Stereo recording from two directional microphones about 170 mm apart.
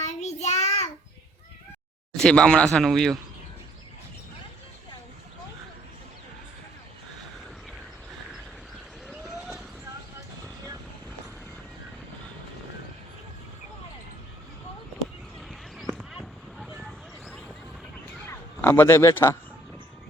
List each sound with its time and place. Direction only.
0.0 s child singing: 40° left (ahead or behind)
2.1 s speech: 5° left (ahead or behind)
9.0 s vehicle: centre (ahead or behind)
15.4 s a sound: centre (ahead or behind)
18.3 s a man's voice: 15° left (ahead or behind)